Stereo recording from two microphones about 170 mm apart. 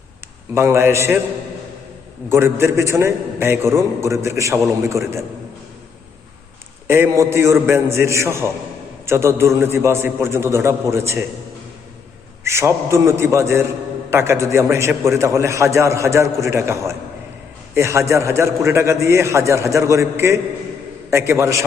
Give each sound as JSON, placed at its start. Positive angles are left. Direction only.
{"t": 0.5, "sound": "a man's voice", "side_deg": -15}
{"t": 2.3, "sound": "a man's voice", "side_deg": -15}
{"t": 6.8, "sound": "a man's voice", "side_deg": -15}
{"t": 12.5, "sound": "a man's voice", "side_deg": -15}